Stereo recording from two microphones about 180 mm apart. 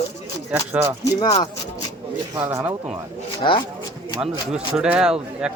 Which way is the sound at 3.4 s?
25° left (ahead or behind).